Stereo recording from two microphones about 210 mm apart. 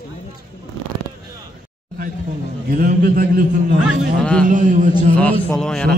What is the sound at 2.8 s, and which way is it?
Speech, 45° right (ahead or behind).